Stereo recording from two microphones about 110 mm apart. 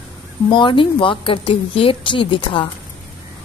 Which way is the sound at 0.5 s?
45° left (ahead or behind).